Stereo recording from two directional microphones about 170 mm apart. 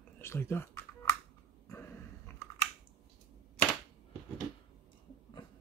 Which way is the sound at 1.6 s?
15° left (ahead or behind).